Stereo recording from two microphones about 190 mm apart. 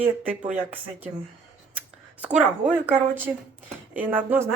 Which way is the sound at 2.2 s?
5° right (ahead or behind).